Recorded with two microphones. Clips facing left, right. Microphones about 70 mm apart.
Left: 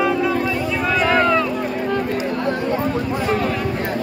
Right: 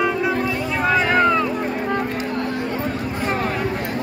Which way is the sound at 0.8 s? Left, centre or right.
Right.